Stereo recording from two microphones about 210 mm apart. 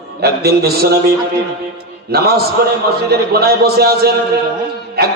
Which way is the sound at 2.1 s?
45° right (ahead or behind).